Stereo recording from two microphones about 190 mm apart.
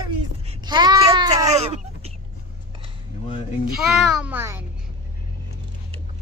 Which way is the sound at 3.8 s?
5° right (ahead or behind).